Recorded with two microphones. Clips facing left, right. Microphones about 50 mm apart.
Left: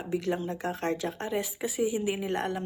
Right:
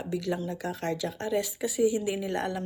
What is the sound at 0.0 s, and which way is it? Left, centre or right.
A woman's voice, left.